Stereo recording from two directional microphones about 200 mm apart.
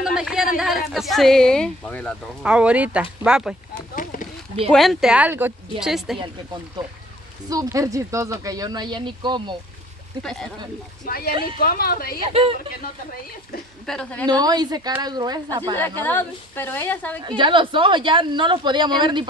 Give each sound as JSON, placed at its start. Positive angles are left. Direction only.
{"t": 0.0, "sound": "a sound", "side_deg": 0}
{"t": 0.6, "sound": "speech", "side_deg": 0}
{"t": 2.4, "sound": "speech", "side_deg": -5}
{"t": 3.7, "sound": "a sound", "side_deg": 45}
{"t": 4.6, "sound": "speech", "side_deg": 0}
{"t": 7.4, "sound": "speech", "side_deg": -15}
{"t": 10.2, "sound": "speech", "side_deg": 0}
{"t": 11.1, "sound": "a woman's voice", "side_deg": 50}
{"t": 12.3, "sound": "speech", "side_deg": -30}
{"t": 13.8, "sound": "speech", "side_deg": 5}
{"t": 14.2, "sound": "speech", "side_deg": -20}
{"t": 16.0, "sound": "a woman's voice", "side_deg": 10}
{"t": 17.4, "sound": "speech", "side_deg": -25}